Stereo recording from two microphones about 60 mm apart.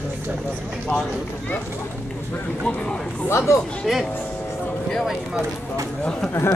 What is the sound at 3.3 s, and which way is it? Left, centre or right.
Speech, left.